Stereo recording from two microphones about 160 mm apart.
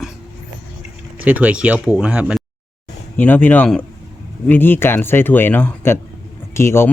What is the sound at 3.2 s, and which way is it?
Speech, 10° left (ahead or behind).